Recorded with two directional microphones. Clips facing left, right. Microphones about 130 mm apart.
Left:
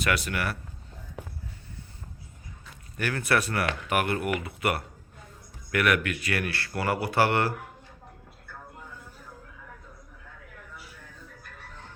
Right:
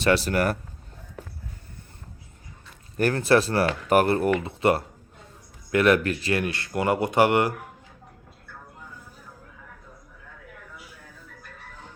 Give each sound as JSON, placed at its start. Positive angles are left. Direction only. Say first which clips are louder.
{"t": 0.0, "sound": "speech", "louder": "right 7 dB", "side_deg": -30}
{"t": 3.0, "sound": "speech", "louder": "right 7 dB", "side_deg": -35}